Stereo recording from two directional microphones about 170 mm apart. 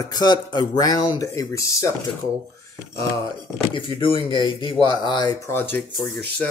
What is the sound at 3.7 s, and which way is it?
Speech, 30° left (ahead or behind).